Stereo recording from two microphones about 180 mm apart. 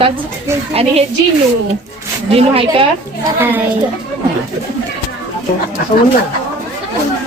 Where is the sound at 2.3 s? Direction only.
30° right (ahead or behind).